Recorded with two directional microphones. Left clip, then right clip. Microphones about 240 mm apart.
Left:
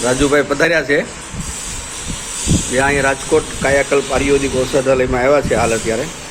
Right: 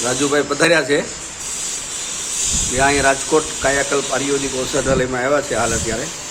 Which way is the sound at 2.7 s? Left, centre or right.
Centre.